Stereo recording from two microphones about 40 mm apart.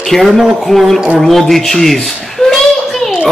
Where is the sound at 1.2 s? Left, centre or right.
Centre.